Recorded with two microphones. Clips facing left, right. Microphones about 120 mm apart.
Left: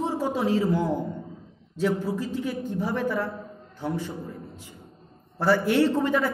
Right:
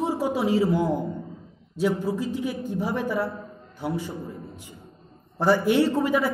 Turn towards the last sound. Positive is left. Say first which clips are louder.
# even
turn(degrees=-10)  # may be behind; listen again after turning